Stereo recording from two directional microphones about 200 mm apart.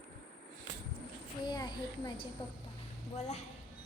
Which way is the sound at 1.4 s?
20° left (ahead or behind).